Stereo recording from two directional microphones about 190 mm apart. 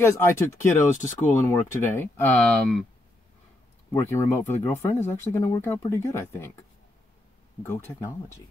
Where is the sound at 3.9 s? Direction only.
15° left (ahead or behind).